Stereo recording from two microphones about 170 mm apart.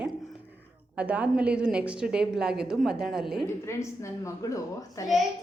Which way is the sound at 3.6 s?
15° left (ahead or behind).